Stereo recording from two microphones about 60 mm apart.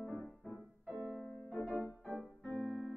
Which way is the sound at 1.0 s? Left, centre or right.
Centre.